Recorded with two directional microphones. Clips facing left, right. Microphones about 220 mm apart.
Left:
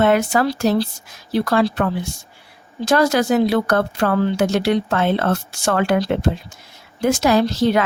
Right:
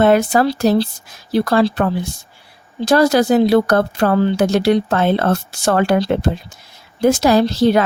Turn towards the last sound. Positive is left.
turn(degrees=-35)  # may be behind; listen again after turning